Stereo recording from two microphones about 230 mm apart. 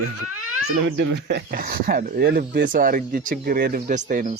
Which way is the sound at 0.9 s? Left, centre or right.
Right.